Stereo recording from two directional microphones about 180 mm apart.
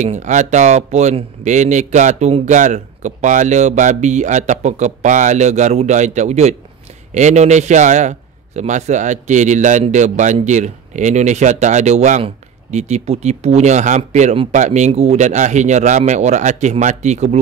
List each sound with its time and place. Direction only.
0.0 s speech: 40° right (ahead or behind)